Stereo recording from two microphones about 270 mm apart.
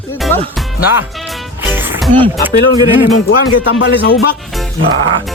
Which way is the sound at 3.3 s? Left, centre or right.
Left.